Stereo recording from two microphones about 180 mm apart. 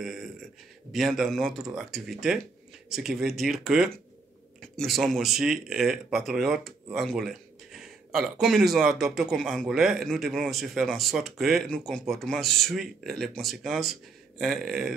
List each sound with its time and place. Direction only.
0.0 s speech: centre (ahead or behind)